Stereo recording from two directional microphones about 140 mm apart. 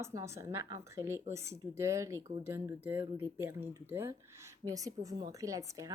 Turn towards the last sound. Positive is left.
turn(degrees=-25)  # may be behind; listen again after turning